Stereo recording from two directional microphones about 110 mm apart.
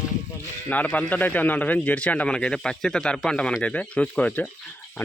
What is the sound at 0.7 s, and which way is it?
A man's voice, 15° left (ahead or behind).